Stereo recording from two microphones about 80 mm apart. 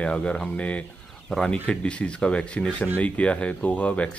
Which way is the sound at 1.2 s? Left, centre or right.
Centre.